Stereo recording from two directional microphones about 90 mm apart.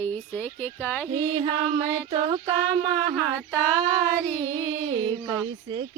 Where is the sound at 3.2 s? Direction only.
15° left (ahead or behind).